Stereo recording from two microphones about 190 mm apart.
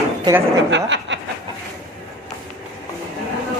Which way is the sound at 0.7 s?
75° right (ahead or behind).